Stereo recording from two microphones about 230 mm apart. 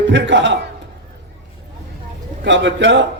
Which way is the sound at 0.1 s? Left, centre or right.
Right.